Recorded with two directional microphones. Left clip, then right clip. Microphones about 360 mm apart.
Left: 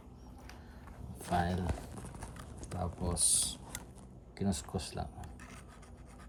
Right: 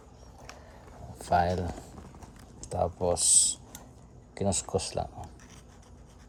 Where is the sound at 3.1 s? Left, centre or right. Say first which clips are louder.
Right 7 dB; right.